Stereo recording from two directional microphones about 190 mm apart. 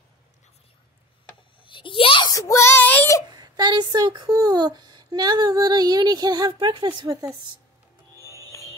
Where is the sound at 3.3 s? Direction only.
20° right (ahead or behind).